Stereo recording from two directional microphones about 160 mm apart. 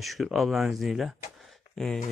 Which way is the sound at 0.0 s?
Centre (ahead or behind).